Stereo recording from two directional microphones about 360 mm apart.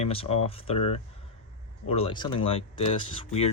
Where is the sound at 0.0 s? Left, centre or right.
Centre.